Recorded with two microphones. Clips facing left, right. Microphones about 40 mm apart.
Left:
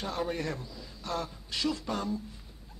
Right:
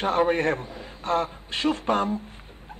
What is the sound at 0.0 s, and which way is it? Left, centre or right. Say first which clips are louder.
Speech: right 11 dB; right.